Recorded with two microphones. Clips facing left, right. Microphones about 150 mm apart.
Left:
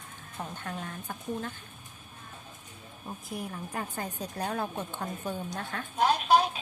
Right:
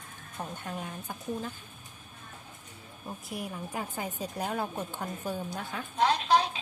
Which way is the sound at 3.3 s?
5° right (ahead or behind).